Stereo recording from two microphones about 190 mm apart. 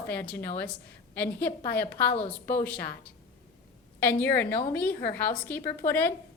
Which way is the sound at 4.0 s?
10° left (ahead or behind).